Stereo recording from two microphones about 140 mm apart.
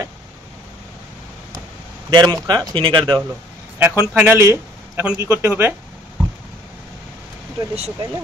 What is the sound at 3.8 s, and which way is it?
A man's voice, 15° right (ahead or behind).